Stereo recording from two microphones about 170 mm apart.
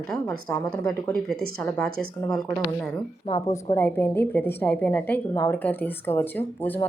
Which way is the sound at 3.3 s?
20° left (ahead or behind).